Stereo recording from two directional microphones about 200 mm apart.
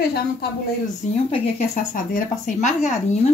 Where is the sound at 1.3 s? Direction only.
40° left (ahead or behind).